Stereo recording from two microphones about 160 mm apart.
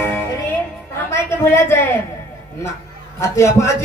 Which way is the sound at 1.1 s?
15° left (ahead or behind).